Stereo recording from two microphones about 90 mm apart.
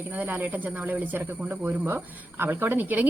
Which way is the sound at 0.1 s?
20° right (ahead or behind).